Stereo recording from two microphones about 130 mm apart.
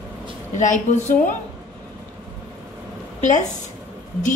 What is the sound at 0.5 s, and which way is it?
Speech, 70° left (ahead or behind).